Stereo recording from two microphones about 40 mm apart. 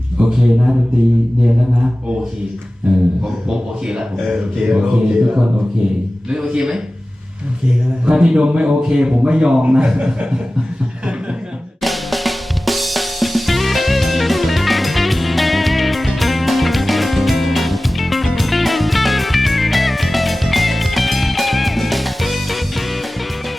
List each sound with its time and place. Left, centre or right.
0.2 s a sound: right
2.9 s a man's voice: right
8.0 s a man's voice: right
11.8 s drum kit: centre